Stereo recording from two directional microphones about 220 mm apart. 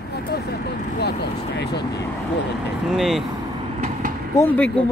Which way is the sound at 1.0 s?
50° left (ahead or behind).